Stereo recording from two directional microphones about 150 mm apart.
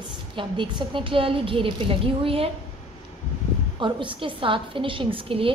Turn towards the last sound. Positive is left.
turn(degrees=-35)  # may be behind; listen again after turning